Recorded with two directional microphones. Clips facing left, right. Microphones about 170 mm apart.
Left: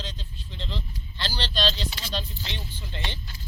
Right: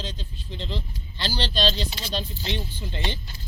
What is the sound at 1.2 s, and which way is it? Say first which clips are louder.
Speech: right 3 dB; 10° right (ahead or behind).